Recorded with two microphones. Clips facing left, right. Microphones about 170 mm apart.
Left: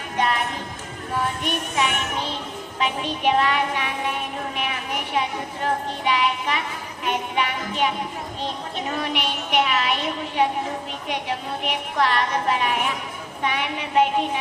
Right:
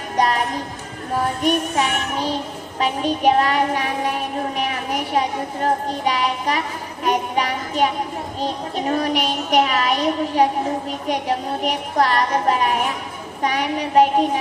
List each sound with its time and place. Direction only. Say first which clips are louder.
0.2 s music: right 4 dB; 40° right (ahead or behind)
1.1 s child singing: right 6 dB; 40° right (ahead or behind)
7.0 s music: right 4 dB; 40° right (ahead or behind)
8.4 s child singing: right 6 dB; 40° right (ahead or behind)